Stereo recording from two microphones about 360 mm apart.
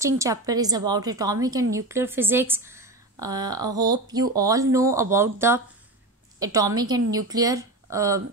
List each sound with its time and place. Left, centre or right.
0.0 s speech: centre